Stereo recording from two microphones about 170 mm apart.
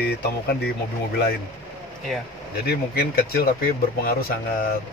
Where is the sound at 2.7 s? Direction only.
65° left (ahead or behind).